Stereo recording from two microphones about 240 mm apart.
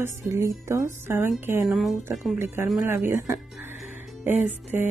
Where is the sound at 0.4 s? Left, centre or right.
Centre.